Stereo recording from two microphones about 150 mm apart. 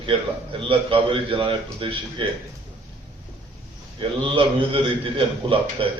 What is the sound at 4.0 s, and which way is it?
A man's voice, 35° right (ahead or behind).